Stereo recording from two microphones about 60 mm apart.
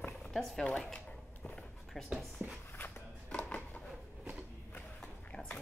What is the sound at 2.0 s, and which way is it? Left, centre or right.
Speech, centre.